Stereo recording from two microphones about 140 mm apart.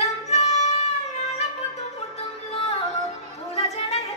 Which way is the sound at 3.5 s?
45° left (ahead or behind).